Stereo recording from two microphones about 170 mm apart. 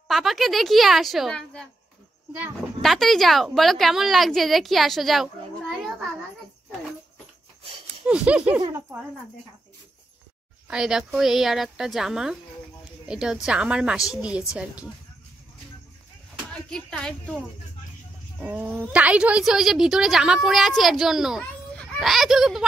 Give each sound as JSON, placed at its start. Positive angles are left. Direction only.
{"t": 0.1, "sound": "a woman's voice", "side_deg": 0}
{"t": 2.8, "sound": "a woman's voice", "side_deg": 0}
{"t": 8.1, "sound": "a woman's voice", "side_deg": -5}
{"t": 8.5, "sound": "speech", "side_deg": -20}
{"t": 10.7, "sound": "a woman's voice", "side_deg": -5}
{"t": 16.7, "sound": "a woman's voice", "side_deg": 5}
{"t": 18.4, "sound": "a woman's voice", "side_deg": -10}